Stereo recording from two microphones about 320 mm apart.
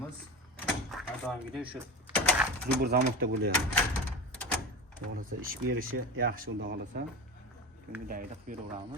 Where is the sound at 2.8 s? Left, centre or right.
Right.